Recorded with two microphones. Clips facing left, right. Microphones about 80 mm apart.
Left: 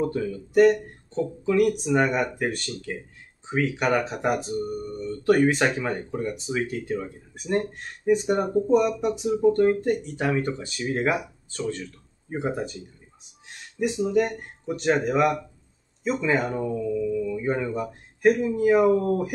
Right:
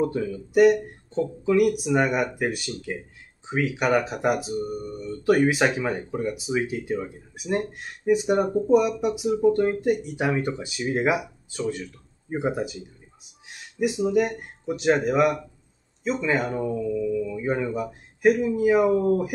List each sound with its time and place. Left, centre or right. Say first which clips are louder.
0.0 s speech: right 1 dB; centre